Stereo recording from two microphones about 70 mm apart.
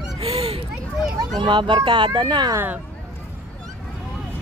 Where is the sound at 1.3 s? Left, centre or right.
Right.